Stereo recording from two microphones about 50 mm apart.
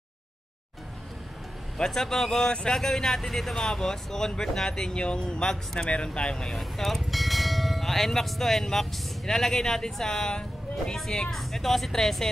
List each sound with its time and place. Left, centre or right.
1.8 s speech: centre
6.6 s speech: centre